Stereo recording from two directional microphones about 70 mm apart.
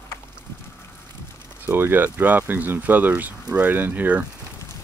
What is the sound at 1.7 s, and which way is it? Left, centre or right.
Speech, right.